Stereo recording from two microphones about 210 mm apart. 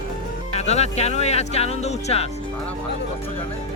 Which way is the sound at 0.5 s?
30° left (ahead or behind).